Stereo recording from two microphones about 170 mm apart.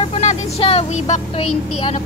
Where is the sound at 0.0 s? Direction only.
40° left (ahead or behind).